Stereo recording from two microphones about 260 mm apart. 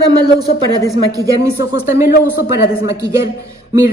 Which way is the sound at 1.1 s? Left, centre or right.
Centre.